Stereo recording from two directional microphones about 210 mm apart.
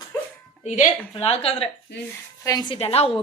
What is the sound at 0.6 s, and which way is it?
Speech, 40° left (ahead or behind).